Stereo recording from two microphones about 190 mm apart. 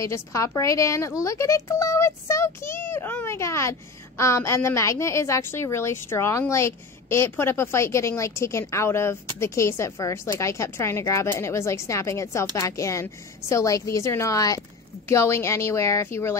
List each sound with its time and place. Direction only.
0.0 s a woman's voice: 15° left (ahead or behind)